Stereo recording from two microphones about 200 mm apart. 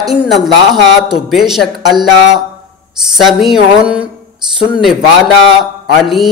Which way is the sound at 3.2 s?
Centre (ahead or behind).